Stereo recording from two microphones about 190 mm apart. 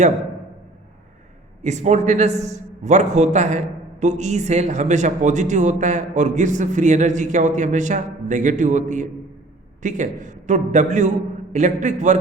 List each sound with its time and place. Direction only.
1.6 s speech: 40° right (ahead or behind)